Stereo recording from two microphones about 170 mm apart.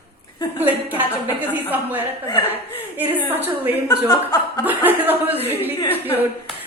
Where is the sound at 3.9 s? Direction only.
20° left (ahead or behind).